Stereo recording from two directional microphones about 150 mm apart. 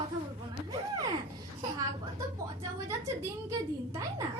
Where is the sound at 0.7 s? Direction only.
25° right (ahead or behind).